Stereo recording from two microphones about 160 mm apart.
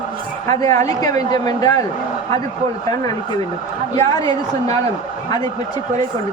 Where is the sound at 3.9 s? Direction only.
20° left (ahead or behind).